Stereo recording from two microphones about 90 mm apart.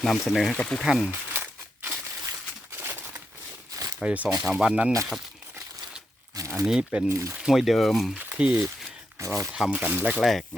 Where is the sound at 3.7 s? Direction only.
40° right (ahead or behind).